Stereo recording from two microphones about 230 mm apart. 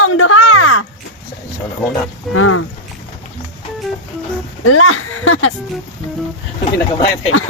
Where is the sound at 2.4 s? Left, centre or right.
Left.